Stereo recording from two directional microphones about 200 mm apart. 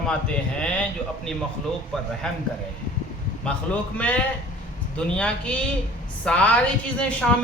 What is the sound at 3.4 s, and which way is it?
Speech, 5° left (ahead or behind).